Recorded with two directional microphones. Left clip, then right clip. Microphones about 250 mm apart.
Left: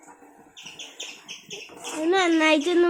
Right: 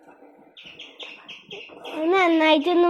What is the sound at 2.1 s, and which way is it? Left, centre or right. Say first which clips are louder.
Speech: right 2 dB; centre.